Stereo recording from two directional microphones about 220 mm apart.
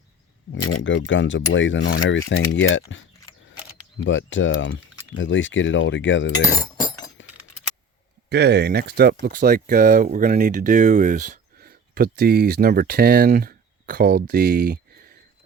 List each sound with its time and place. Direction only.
0.5 s speech: 75° left (ahead or behind); by 2.8 s 60° left (ahead or behind)
4.0 s speech: 60° left (ahead or behind)
6.6 s chink: 20° left (ahead or behind)
8.3 s speech: 50° right (ahead or behind)